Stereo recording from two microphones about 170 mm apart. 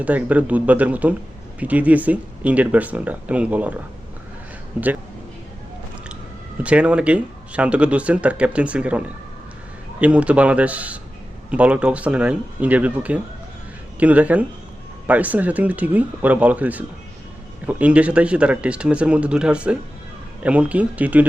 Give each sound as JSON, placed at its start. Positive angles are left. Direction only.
{"t": 0.0, "sound": "speech", "side_deg": -10}
{"t": 6.6, "sound": "speech", "side_deg": -5}